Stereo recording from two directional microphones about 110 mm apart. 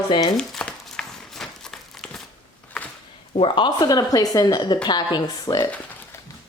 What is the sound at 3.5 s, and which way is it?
A woman's voice, 40° left (ahead or behind).